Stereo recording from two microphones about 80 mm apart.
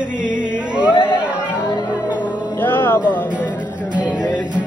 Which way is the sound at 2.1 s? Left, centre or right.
Left.